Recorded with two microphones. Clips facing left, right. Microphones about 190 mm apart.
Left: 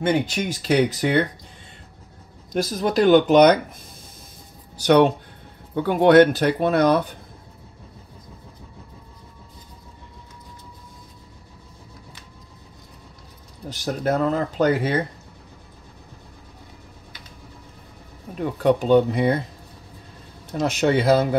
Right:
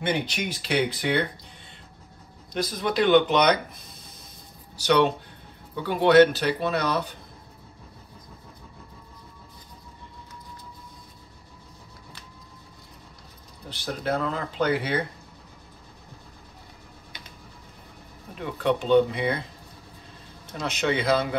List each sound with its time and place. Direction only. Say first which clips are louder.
0.0 s speech: left 6 dB; 45° left (ahead or behind)
2.5 s speech: left 5 dB; 45° left (ahead or behind)
4.7 s speech: left 5 dB; 50° left (ahead or behind)
13.7 s speech: left 5 dB; 45° left (ahead or behind)
18.4 s speech: left 6 dB; 40° left (ahead or behind)
20.8 s speech: left 5 dB; 40° left (ahead or behind)